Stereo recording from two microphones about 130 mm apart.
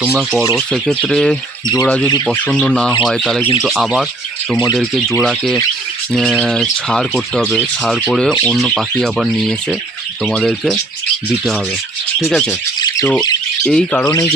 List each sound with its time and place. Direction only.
0.0 s speech: 15° right (ahead or behind)
0.5 s speech: 5° left (ahead or behind)
12.5 s bird: 25° left (ahead or behind)
13.2 s squawk: 30° left (ahead or behind)
13.7 s speech: 10° left (ahead or behind)